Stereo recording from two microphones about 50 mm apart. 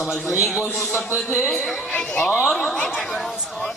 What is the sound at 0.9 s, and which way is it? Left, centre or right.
Speech, left.